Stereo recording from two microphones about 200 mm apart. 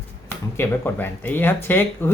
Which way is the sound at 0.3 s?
10° left (ahead or behind).